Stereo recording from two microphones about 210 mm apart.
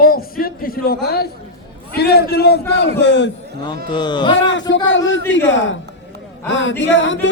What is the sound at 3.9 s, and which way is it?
Speech, 20° left (ahead or behind).